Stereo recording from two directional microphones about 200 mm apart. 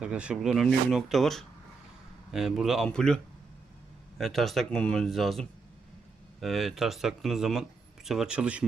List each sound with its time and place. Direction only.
0.0 s speech: 5° right (ahead or behind)
4.2 s speech: centre (ahead or behind)